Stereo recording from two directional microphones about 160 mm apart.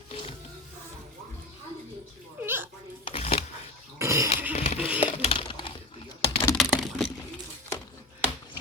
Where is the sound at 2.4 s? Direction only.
15° right (ahead or behind).